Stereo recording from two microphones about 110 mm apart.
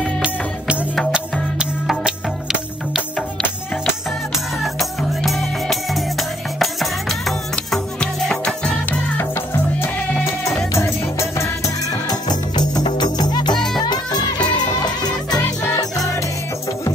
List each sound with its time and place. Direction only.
0.2 s music: 10° right (ahead or behind)
4.7 s music: centre (ahead or behind)
9.2 s music: 20° left (ahead or behind)
12.1 s music: 40° left (ahead or behind)